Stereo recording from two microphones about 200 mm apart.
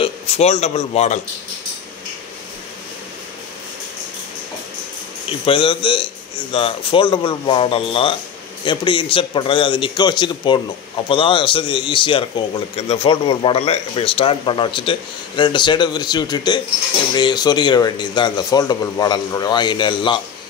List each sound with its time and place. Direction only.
0.0 s a man's voice: 30° left (ahead or behind)
5.4 s speech: 25° left (ahead or behind)